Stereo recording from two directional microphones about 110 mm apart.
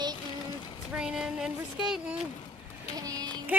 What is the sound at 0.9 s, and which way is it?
Speech, 5° right (ahead or behind).